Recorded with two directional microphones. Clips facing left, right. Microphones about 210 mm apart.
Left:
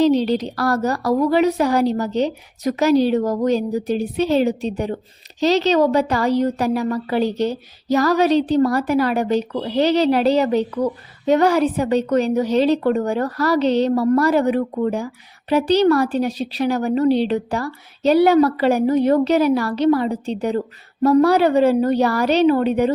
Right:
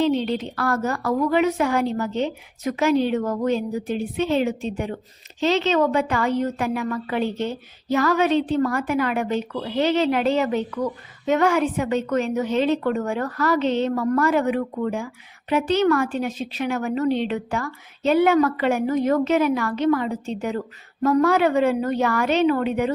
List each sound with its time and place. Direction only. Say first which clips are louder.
0.0 s a woman's voice: left 5 dB; 40° left (ahead or behind)